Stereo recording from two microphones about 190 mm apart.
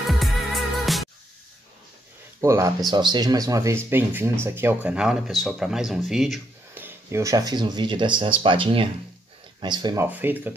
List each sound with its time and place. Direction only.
0.0 s music: centre (ahead or behind)
2.4 s speech: 15° right (ahead or behind)
10.0 s speech: 10° right (ahead or behind)